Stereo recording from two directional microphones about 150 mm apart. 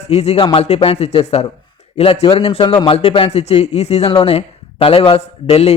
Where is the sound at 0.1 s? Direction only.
45° left (ahead or behind).